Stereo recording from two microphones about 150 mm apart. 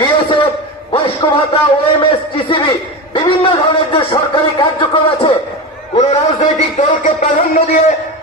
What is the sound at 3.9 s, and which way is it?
Speech, 30° left (ahead or behind).